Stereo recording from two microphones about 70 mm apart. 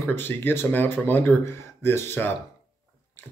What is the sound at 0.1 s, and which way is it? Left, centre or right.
Speech, left.